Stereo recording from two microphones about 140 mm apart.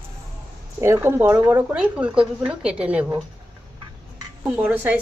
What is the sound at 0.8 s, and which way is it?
A woman's voice, 15° right (ahead or behind).